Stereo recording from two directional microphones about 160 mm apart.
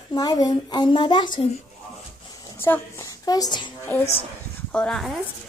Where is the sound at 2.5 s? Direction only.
15° left (ahead or behind).